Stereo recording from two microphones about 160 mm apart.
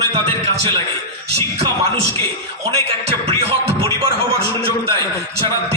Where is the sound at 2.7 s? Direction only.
35° right (ahead or behind).